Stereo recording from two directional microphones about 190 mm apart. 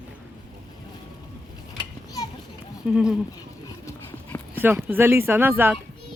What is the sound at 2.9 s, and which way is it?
Speech, 5° right (ahead or behind).